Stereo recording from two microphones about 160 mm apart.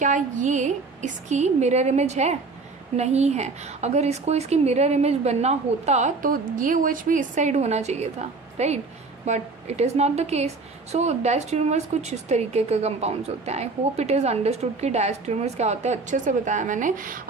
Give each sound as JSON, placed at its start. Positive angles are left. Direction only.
{"t": 0.0, "sound": "a woman's voice", "side_deg": -50}